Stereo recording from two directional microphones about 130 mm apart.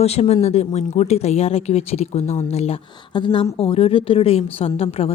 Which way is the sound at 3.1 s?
40° left (ahead or behind).